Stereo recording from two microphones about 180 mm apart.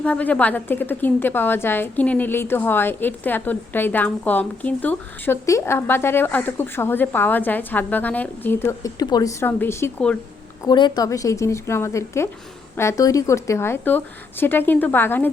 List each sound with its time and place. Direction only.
0.0 s a woman's voice: 10° left (ahead or behind)
10.6 s a woman's voice: 25° left (ahead or behind)